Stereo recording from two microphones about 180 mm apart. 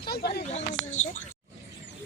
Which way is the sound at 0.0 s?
60° left (ahead or behind).